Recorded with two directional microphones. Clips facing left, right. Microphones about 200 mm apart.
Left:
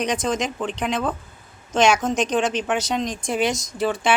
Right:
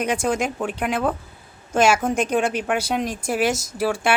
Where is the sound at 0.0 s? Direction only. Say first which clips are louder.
Right 1 dB; 10° right (ahead or behind).